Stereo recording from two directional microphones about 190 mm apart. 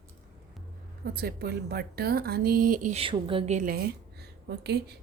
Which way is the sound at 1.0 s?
55° right (ahead or behind).